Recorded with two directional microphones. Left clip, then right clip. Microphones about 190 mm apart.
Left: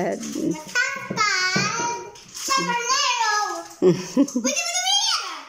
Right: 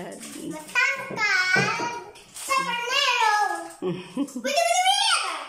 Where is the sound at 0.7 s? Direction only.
10° right (ahead or behind).